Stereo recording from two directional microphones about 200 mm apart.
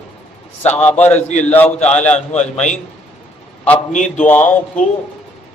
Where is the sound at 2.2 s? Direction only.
35° left (ahead or behind).